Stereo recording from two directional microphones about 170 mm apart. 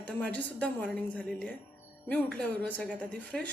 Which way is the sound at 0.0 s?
10° left (ahead or behind).